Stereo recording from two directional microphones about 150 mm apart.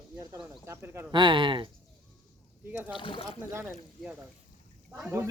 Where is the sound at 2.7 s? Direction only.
10° right (ahead or behind).